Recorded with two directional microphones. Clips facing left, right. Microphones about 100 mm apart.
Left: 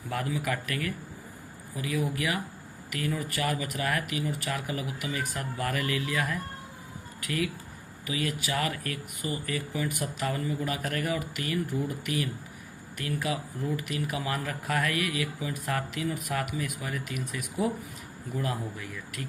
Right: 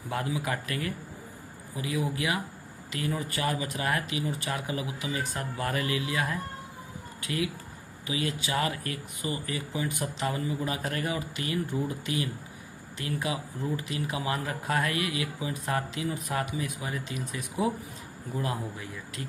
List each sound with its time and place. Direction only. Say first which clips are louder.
0.1 s speech: even; 20° right (ahead or behind)